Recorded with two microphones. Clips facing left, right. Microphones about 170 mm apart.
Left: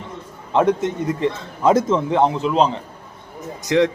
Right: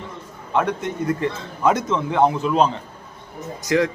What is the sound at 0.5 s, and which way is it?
Speech, 25° left (ahead or behind).